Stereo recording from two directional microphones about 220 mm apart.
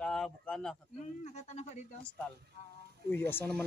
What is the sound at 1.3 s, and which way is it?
Speech, 30° left (ahead or behind).